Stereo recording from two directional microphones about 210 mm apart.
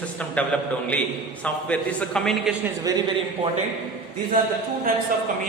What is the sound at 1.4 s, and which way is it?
A man's voice, 5° left (ahead or behind).